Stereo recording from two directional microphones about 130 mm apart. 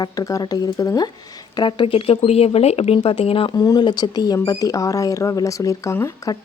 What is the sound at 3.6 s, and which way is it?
Speech, 35° left (ahead or behind).